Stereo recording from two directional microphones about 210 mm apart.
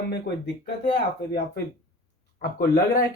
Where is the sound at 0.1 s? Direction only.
55° left (ahead or behind).